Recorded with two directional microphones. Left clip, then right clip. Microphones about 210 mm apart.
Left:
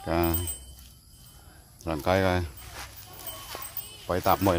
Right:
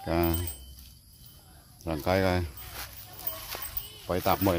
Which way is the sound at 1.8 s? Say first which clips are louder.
Left 2 dB; 10° left (ahead or behind).